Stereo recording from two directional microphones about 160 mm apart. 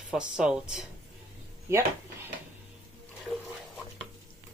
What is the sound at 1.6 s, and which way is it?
Speech, 15° right (ahead or behind).